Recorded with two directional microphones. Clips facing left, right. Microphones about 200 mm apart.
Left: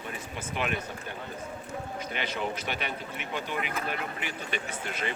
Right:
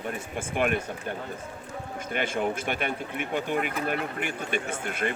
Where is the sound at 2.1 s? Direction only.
50° right (ahead or behind).